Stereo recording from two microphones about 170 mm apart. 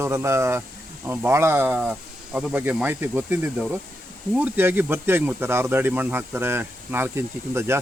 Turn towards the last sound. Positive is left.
turn(degrees=-15)  # may be behind; listen again after turning